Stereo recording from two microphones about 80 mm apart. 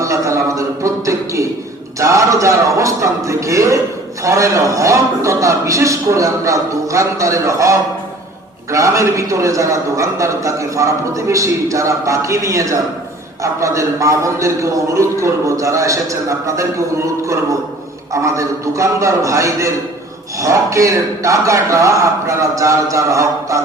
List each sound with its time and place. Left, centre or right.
0.0 s a sound: right
2.0 s a man's voice: right
18.1 s a man's voice: right